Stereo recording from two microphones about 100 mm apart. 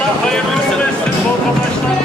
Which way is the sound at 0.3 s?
5° left (ahead or behind).